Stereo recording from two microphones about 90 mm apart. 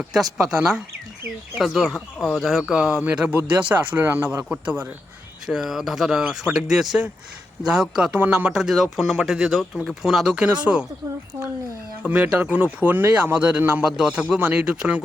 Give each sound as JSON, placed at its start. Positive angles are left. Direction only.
{"t": 0.0, "sound": "speech", "side_deg": -5}
{"t": 4.4, "sound": "speech", "side_deg": -15}
{"t": 12.0, "sound": "speech", "side_deg": -15}